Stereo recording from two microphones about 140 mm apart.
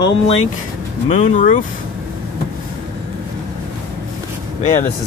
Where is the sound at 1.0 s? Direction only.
50° left (ahead or behind).